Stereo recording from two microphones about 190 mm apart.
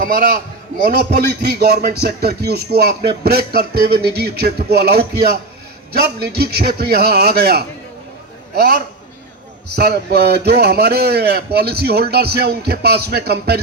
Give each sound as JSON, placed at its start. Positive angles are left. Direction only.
{"t": 0.0, "sound": "a man's voice", "side_deg": -50}